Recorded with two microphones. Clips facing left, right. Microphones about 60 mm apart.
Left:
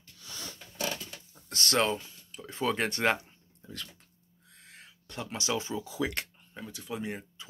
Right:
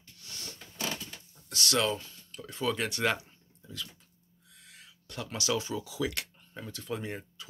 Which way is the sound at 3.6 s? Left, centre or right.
Left.